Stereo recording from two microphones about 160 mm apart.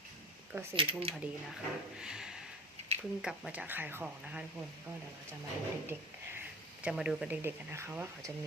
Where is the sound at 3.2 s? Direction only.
5° right (ahead or behind).